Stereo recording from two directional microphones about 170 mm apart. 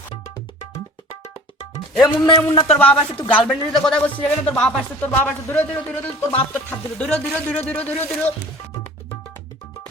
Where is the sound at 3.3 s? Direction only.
Centre (ahead or behind).